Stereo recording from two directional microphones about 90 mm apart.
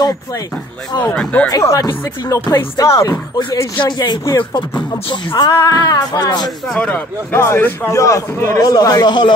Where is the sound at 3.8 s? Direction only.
55° left (ahead or behind).